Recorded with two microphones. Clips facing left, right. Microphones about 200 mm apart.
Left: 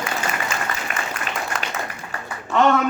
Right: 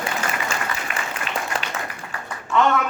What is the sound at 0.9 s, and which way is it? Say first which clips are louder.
Applause: left 1 dB; 45° left (ahead or behind).